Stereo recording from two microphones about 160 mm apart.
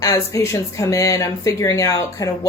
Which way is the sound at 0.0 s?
20° left (ahead or behind).